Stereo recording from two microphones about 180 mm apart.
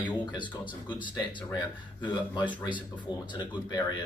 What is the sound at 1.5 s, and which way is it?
Speech, 25° left (ahead or behind).